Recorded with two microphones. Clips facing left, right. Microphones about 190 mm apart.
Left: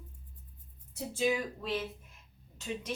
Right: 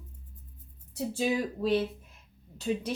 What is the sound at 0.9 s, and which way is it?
A woman's voice, 35° right (ahead or behind).